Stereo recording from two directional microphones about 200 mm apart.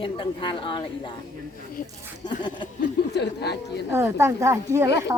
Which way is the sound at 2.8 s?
60° left (ahead or behind).